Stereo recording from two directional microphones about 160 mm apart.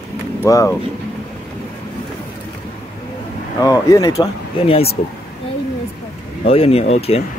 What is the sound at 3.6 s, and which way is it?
Speech, 20° left (ahead or behind).